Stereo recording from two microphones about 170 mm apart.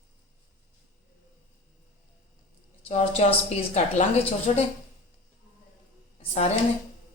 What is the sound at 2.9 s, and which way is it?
A woman's voice, 35° left (ahead or behind).